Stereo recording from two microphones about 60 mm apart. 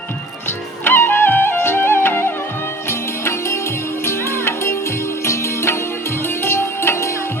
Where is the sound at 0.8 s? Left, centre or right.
Left.